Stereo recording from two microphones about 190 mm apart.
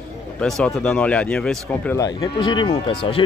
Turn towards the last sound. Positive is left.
turn(degrees=30)  # may be behind; listen again after turning